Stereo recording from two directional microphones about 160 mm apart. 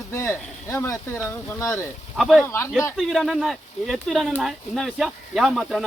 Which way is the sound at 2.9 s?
Centre (ahead or behind).